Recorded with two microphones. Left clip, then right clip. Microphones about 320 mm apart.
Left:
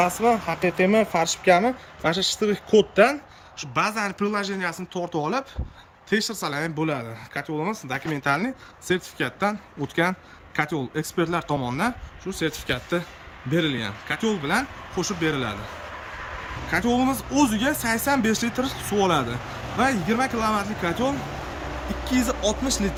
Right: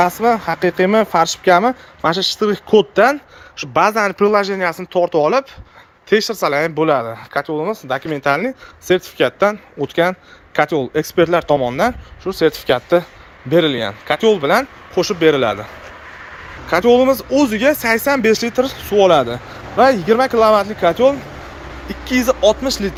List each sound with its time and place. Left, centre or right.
0.2 s speech: right
1.1 s speech: centre
16.7 s speech: centre
22.3 s speech: centre